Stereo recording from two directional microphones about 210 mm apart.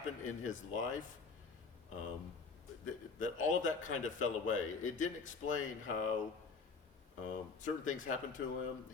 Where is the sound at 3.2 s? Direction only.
35° left (ahead or behind).